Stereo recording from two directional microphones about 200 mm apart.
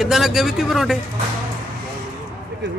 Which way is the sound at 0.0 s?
Centre (ahead or behind).